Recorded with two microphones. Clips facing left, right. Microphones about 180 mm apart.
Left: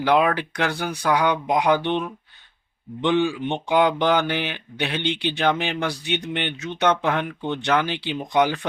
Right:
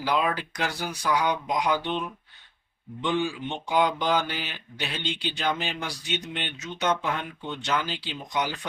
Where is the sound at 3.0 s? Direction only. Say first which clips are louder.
Left 6 dB; 65° left (ahead or behind).